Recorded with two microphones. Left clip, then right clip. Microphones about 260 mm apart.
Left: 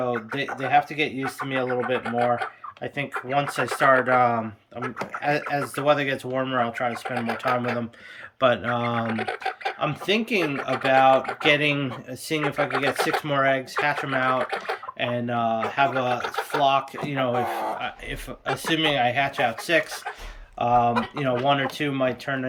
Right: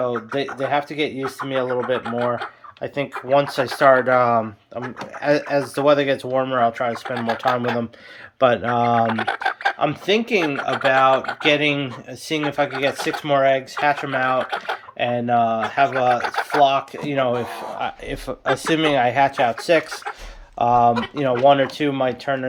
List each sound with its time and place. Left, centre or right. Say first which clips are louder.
0.3 s speech: left 1 dB; centre
2.8 s speech: right 4 dB; centre
6.9 s speech: right 4 dB; centre
8.4 s speech: right 5 dB; centre
12.9 s speech: left 1 dB; centre
13.2 s speech: right 5 dB; centre